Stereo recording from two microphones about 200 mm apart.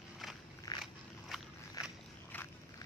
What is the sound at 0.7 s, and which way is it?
Biting, 20° left (ahead or behind).